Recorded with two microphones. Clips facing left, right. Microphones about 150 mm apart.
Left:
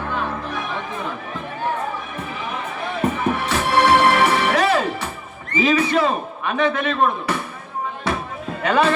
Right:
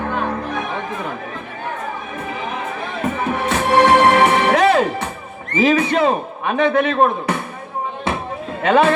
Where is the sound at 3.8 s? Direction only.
45° right (ahead or behind).